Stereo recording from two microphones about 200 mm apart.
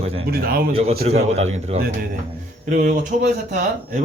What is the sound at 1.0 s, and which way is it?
A man's voice, 35° right (ahead or behind).